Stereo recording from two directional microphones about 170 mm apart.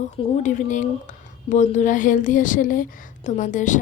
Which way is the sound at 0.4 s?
45° left (ahead or behind).